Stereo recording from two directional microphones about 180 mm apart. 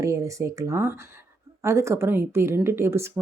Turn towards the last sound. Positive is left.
turn(degrees=-15)  # may be behind; listen again after turning